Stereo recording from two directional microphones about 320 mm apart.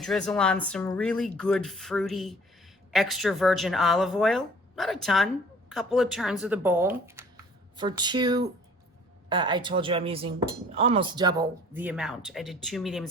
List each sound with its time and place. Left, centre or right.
0.0 s speech: centre